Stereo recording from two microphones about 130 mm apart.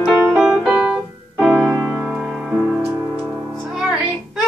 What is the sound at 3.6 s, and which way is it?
Child singing, 5° right (ahead or behind).